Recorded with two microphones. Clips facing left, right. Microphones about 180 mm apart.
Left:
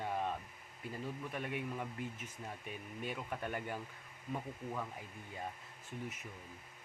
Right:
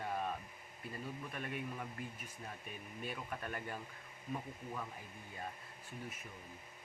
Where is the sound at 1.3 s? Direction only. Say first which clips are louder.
Left 3 dB; 15° left (ahead or behind).